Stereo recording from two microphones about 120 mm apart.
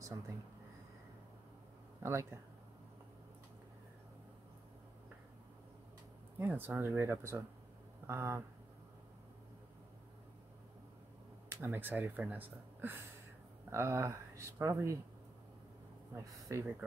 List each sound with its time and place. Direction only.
2.0 s speech: 25° right (ahead or behind)
6.3 s speech: 15° right (ahead or behind)
11.4 s speech: 20° right (ahead or behind)
16.2 s speech: 25° right (ahead or behind)